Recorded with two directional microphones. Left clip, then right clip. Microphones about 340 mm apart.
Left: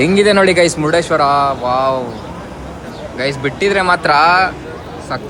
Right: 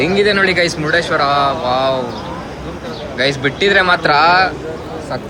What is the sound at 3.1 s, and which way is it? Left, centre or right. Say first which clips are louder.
Speech: right 2 dB; centre.